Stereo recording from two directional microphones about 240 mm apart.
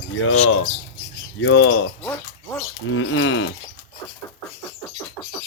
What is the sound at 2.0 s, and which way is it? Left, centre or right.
Speech, centre.